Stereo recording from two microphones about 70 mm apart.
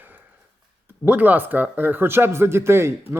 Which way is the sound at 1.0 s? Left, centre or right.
Right.